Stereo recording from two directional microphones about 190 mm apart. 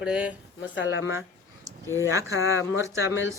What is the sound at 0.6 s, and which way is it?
Speech, 70° left (ahead or behind).